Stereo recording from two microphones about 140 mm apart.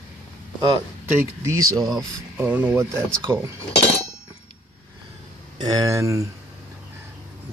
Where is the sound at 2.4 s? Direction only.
10° right (ahead or behind).